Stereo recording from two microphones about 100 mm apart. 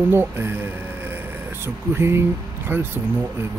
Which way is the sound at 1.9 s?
25° right (ahead or behind).